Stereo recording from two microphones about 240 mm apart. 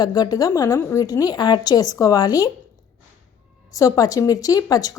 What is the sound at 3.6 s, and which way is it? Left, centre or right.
A woman's voice, centre.